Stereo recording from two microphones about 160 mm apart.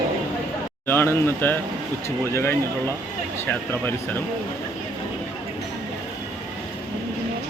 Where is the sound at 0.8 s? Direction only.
15° left (ahead or behind).